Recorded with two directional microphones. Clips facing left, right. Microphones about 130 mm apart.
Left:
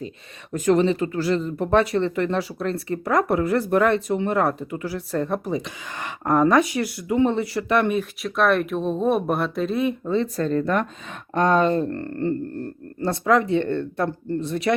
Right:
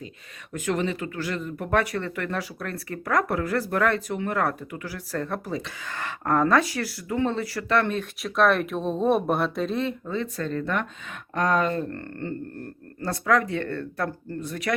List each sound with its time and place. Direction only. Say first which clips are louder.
0.5 s speech: left 8 dB; 35° left (ahead or behind); by 8.0 s 15° left (ahead or behind)
8.2 s speech: even; centre (ahead or behind)
10.1 s speech: left 7 dB; 35° left (ahead or behind)